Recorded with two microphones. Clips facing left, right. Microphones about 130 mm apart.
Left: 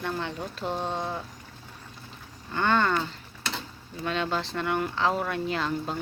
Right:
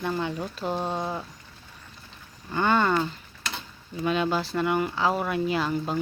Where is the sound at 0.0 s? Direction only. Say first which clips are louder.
Right 3 dB; 5° right (ahead or behind).